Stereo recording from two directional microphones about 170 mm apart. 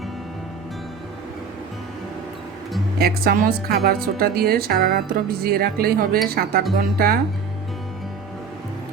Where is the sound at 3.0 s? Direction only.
60° right (ahead or behind).